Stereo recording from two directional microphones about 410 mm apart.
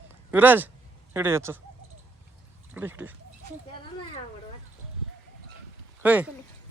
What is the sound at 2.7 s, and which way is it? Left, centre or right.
Speech, centre.